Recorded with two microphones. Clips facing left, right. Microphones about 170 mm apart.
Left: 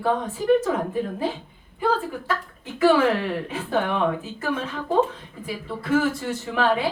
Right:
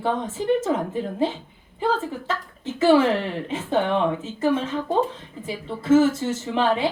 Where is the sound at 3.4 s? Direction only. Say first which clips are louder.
Right 2 dB; 25° right (ahead or behind).